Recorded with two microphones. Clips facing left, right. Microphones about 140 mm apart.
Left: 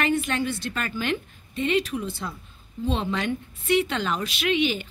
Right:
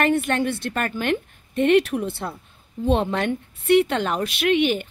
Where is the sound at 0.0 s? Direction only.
55° right (ahead or behind).